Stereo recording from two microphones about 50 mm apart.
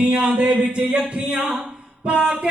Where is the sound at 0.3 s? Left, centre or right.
Right.